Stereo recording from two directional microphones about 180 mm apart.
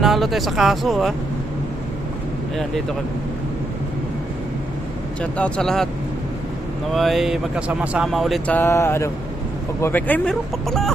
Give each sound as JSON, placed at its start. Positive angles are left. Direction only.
{"t": 0.0, "sound": "speech", "side_deg": 0}
{"t": 5.2, "sound": "speech", "side_deg": 5}
{"t": 6.9, "sound": "speech", "side_deg": 0}